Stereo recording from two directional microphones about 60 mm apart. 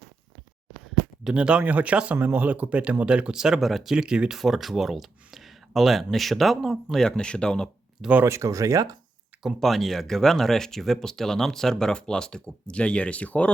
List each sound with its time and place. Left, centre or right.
1.2 s speech: centre
3.6 s speech: centre
3.9 s speech: centre
4.4 s speech: centre
6.9 s speech: centre
8.2 s speech: right
9.6 s speech: centre; by 13.5 s left